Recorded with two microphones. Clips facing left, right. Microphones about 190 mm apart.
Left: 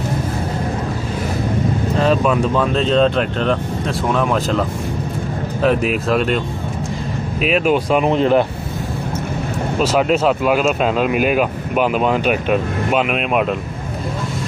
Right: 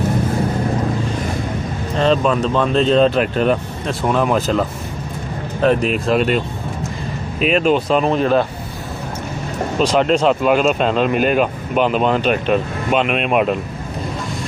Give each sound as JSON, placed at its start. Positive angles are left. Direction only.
{"t": 2.0, "sound": "speech", "side_deg": 5}
{"t": 9.8, "sound": "speech", "side_deg": 5}